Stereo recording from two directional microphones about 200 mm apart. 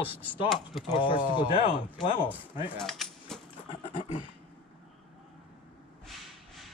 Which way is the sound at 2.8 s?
Centre (ahead or behind).